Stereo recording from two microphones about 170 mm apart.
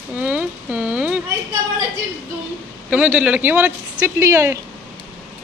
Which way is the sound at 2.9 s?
10° right (ahead or behind).